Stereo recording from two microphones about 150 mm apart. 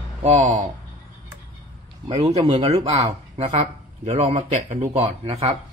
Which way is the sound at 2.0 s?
40° right (ahead or behind).